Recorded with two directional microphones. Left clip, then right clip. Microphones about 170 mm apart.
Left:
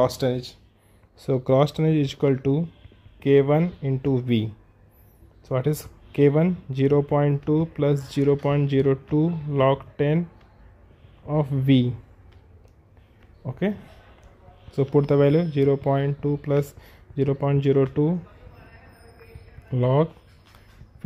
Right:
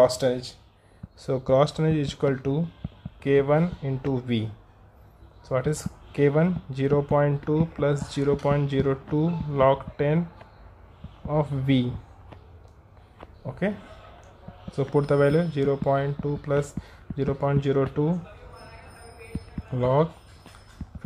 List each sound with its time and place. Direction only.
0.0 s speech: 45° left (ahead or behind)
5.5 s speech: 35° left (ahead or behind)
11.2 s speech: 30° left (ahead or behind)
13.5 s speech: 35° left (ahead or behind)
19.7 s speech: 30° left (ahead or behind)